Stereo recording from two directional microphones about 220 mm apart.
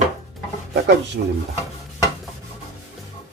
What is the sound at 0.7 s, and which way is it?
Speech, 50° right (ahead or behind).